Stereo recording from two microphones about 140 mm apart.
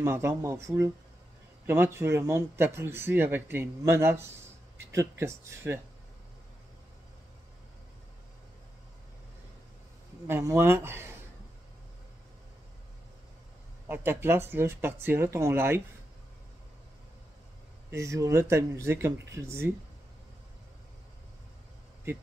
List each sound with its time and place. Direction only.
0.0 s speech: 20° right (ahead or behind)
10.2 s speech: 20° right (ahead or behind)
13.8 s speech: 15° right (ahead or behind)
17.9 s speech: 20° right (ahead or behind)